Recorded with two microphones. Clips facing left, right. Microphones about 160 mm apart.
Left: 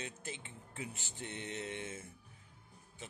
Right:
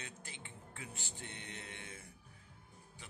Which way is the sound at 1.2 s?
20° left (ahead or behind).